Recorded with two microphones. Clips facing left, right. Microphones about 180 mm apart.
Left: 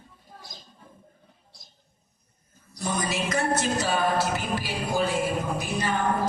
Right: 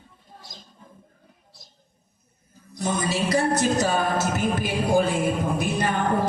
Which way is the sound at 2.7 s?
25° right (ahead or behind).